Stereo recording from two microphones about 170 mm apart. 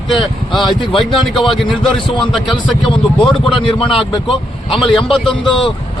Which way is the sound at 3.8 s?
30° left (ahead or behind).